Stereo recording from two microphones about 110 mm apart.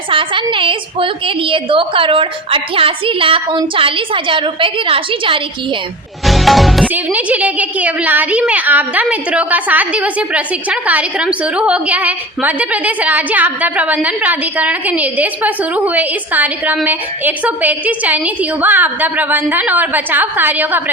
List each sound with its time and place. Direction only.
0.1 s a woman's voice: 50° right (ahead or behind)
6.2 s music: centre (ahead or behind)
6.8 s a woman's voice: 15° right (ahead or behind)